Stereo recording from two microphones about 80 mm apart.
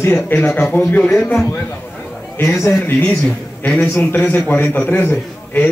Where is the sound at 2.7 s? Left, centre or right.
Left.